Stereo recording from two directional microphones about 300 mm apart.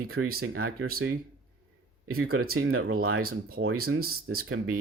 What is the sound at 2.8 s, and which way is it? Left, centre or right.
Speech, right.